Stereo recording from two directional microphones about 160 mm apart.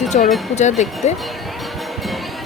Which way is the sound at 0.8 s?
50° left (ahead or behind).